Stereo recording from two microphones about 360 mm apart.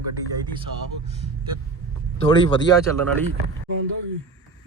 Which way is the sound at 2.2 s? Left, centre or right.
Centre.